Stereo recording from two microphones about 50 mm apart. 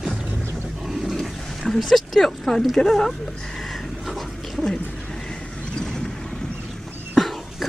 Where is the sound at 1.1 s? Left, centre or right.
Centre.